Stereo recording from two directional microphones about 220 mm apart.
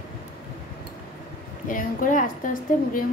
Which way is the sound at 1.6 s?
35° left (ahead or behind).